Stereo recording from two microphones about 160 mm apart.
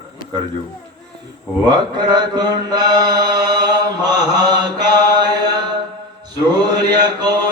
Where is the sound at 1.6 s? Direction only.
25° right (ahead or behind).